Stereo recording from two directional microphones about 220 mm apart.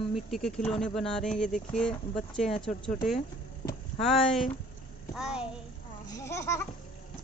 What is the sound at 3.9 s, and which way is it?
Speech, centre (ahead or behind).